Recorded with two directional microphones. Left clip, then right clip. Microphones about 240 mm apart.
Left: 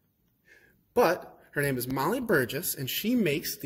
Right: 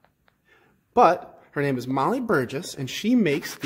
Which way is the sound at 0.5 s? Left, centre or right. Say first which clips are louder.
Right 2 dB; centre.